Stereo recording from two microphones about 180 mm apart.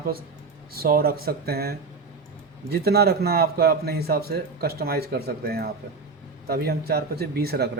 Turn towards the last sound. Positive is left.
turn(degrees=-60)  # may be behind; listen again after turning